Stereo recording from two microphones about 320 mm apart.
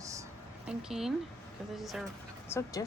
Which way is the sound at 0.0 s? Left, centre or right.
Centre.